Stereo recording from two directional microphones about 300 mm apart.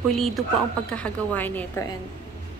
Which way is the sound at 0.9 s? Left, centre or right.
Centre.